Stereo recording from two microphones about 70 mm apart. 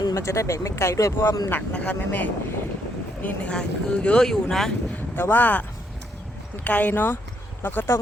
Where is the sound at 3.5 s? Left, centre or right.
Centre.